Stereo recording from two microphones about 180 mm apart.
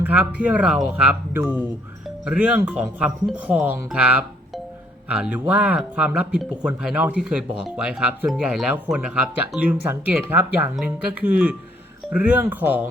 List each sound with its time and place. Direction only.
0.0 s speech: 10° right (ahead or behind)